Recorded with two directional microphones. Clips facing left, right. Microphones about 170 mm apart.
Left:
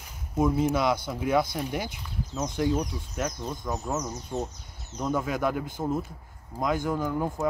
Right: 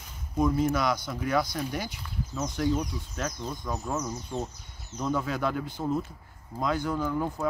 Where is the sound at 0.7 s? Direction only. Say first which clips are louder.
Left 2 dB; 25° left (ahead or behind).